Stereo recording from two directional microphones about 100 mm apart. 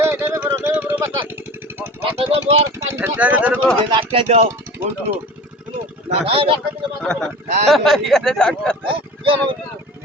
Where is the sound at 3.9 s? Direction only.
60° right (ahead or behind); by 4.4 s 80° right.